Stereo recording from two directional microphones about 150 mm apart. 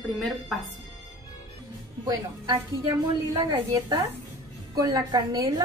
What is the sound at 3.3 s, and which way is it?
A woman's voice, 25° right (ahead or behind).